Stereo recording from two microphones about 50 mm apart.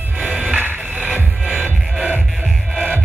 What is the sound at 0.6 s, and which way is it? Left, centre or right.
Music, right.